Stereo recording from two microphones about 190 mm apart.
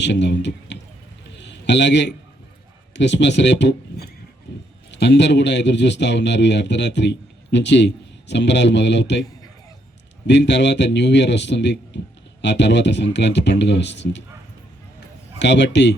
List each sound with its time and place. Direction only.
0.0 s a man's voice: 65° left (ahead or behind)
1.3 s a sound: 65° left (ahead or behind)
2.9 s a man's voice: 65° left (ahead or behind)
10.2 s a man's voice: 65° left (ahead or behind)
15.4 s a man's voice: 65° left (ahead or behind)